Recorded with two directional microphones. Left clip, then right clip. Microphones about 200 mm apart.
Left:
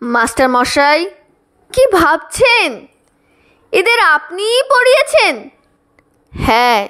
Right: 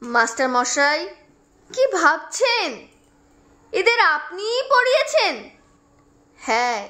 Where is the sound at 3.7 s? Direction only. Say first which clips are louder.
Left 7 dB; 45° left (ahead or behind).